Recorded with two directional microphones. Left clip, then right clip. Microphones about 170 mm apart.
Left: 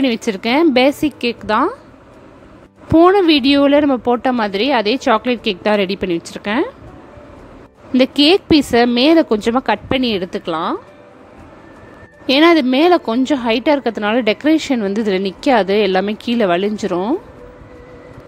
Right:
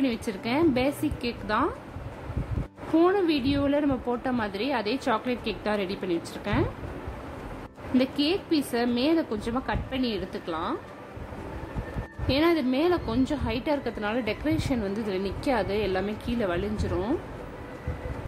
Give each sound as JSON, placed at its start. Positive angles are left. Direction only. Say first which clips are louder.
{"t": 0.0, "sound": "speech", "louder": "left 12 dB", "side_deg": 55}
{"t": 3.0, "sound": "a woman's voice", "louder": "left 13 dB", "side_deg": 55}
{"t": 7.9, "sound": "speech", "louder": "left 14 dB", "side_deg": 55}
{"t": 12.3, "sound": "a woman's voice", "louder": "left 13 dB", "side_deg": 60}